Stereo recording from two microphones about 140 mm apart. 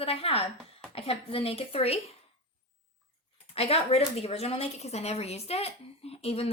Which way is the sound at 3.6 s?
45° left (ahead or behind).